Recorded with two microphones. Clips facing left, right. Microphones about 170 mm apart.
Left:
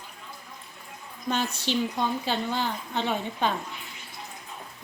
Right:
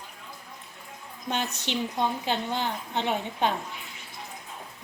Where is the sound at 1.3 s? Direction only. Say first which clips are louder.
Left 2 dB; 20° right (ahead or behind).